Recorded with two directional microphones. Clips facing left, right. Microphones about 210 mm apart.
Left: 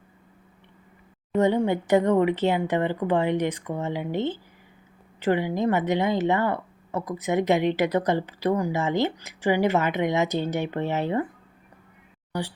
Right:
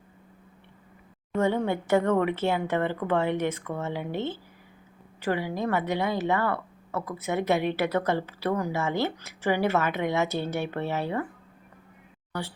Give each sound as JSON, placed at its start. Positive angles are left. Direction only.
{"t": 1.4, "sound": "speech", "side_deg": 15}
{"t": 12.3, "sound": "speech", "side_deg": 15}